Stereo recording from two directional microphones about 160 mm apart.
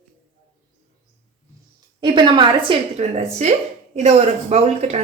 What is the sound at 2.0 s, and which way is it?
A woman's voice, 30° right (ahead or behind).